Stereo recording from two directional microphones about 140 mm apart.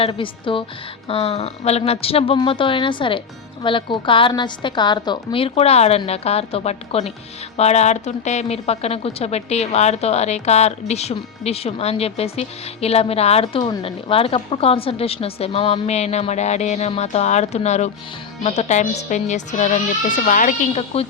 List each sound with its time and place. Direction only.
0.0 s a woman's voice: 40° left (ahead or behind); by 20.7 s 70° left (ahead or behind)
20.7 s a woman's voice: 45° left (ahead or behind)